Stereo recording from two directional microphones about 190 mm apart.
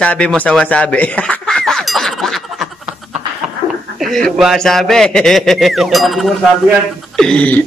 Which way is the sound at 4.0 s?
Centre (ahead or behind).